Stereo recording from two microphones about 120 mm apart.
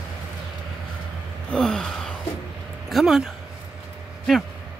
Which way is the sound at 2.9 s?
Centre (ahead or behind).